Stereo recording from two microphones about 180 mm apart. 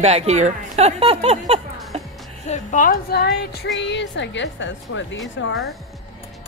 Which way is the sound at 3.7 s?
75° left (ahead or behind).